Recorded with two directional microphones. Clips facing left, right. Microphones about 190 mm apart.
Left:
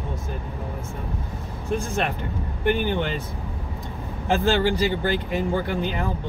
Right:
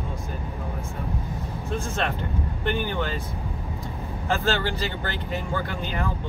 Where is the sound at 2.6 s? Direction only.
15° left (ahead or behind).